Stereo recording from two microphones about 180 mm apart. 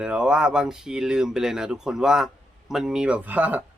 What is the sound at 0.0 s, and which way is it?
Speech, 5° right (ahead or behind).